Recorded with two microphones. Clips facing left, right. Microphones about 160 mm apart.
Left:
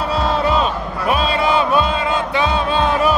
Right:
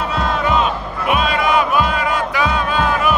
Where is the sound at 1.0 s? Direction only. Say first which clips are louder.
Even; 30° left (ahead or behind).